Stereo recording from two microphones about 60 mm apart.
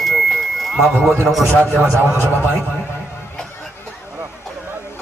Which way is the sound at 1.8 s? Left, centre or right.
Right.